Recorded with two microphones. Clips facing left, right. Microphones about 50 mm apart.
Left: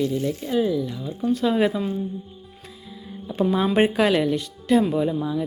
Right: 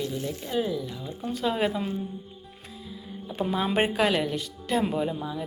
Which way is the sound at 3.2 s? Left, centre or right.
Centre.